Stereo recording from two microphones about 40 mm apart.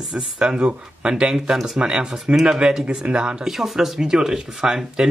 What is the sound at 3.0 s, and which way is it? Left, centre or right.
Speech, right.